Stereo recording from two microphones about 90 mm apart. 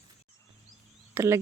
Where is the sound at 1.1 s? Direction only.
30° right (ahead or behind).